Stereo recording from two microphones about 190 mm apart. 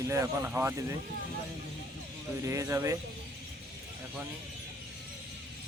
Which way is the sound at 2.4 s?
15° right (ahead or behind).